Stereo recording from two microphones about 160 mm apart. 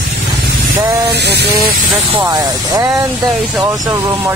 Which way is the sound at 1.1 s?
90° right.